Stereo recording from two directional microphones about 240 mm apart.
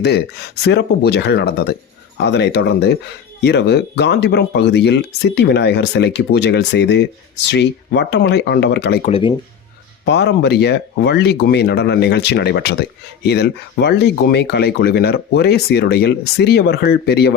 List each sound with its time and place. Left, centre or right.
0.0 s speech: left
9.0 s speech: left
10.1 s speech: left